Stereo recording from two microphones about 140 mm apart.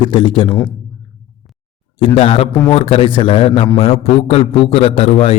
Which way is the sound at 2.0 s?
40° left (ahead or behind).